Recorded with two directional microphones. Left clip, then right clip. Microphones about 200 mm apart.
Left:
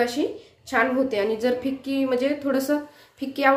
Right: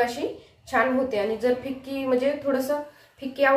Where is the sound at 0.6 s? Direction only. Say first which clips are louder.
Left 1 dB; 45° left (ahead or behind).